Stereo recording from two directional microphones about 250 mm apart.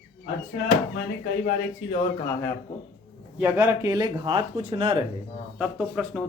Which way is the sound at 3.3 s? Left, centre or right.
Centre.